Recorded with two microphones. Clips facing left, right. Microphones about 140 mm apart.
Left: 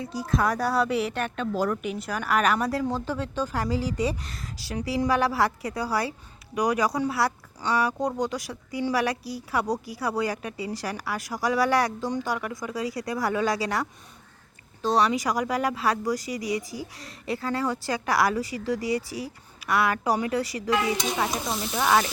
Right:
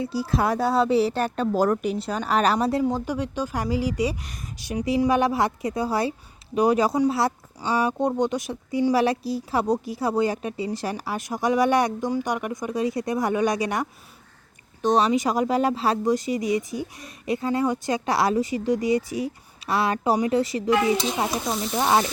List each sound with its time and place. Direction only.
0.0 s a woman's voice: 30° right (ahead or behind)
2.8 s speech: 15° right (ahead or behind)